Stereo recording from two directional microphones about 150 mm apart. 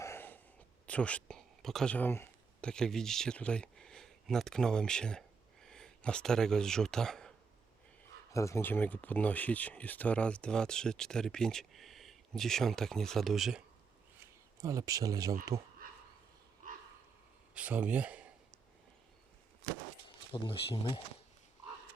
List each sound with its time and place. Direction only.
0.0 s a sound: 15° left (ahead or behind)
0.9 s speech: 10° left (ahead or behind)
8.3 s speech: 20° left (ahead or behind); by 13.6 s centre (ahead or behind)
14.2 s speech: 20° right (ahead or behind)
17.5 s speech: 10° right (ahead or behind)
20.3 s speech: 35° left (ahead or behind)